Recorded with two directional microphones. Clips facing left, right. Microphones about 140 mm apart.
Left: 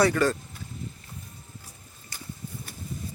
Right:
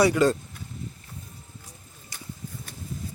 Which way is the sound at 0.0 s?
15° right (ahead or behind).